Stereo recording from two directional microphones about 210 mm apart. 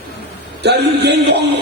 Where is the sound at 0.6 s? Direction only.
50° right (ahead or behind).